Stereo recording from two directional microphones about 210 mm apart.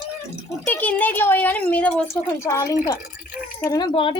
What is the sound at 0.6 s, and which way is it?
Speech, 5° left (ahead or behind).